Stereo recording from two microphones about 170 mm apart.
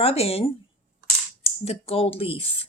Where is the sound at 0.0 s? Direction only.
35° left (ahead or behind).